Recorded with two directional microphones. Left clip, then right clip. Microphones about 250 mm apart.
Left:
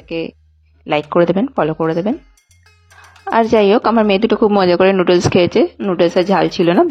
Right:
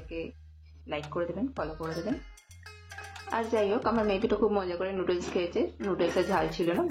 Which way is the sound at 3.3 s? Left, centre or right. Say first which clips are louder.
Left 17 dB; left.